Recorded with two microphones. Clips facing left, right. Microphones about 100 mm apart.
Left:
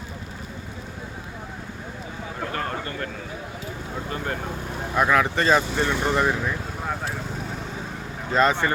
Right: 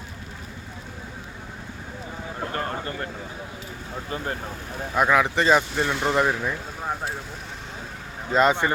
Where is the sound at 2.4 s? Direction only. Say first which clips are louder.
Even; 25° right (ahead or behind).